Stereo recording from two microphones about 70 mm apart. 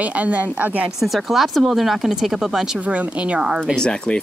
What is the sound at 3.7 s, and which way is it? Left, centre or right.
Speech, centre.